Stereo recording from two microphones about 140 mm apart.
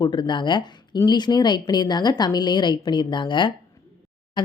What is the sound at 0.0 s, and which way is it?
Speech, 35° left (ahead or behind).